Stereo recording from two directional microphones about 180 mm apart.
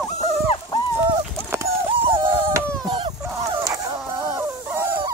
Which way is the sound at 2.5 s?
25° right (ahead or behind).